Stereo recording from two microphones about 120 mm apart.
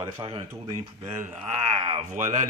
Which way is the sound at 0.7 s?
80° right.